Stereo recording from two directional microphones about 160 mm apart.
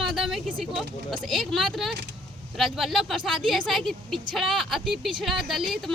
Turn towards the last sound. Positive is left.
turn(degrees=0)  # may be behind; listen again after turning